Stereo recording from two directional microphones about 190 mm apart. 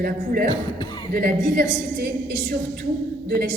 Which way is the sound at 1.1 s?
55° right (ahead or behind).